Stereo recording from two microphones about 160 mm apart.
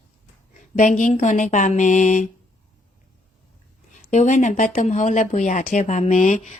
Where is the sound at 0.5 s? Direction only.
55° left (ahead or behind).